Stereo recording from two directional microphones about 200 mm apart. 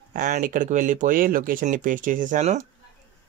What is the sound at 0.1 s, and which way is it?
Speech, 40° right (ahead or behind).